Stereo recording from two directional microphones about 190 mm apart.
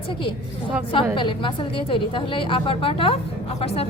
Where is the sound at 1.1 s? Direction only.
25° left (ahead or behind).